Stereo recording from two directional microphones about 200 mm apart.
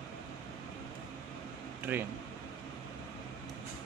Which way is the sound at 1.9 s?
10° right (ahead or behind).